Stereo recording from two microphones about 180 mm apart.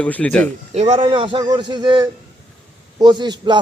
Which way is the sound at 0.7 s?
35° right (ahead or behind).